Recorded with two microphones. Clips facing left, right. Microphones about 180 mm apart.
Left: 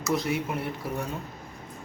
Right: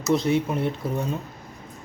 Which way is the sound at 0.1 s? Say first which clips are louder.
Right 6 dB; 25° right (ahead or behind).